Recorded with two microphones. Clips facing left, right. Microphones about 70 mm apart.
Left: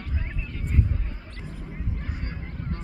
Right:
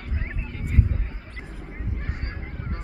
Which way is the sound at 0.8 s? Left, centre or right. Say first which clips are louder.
Right 2 dB; centre.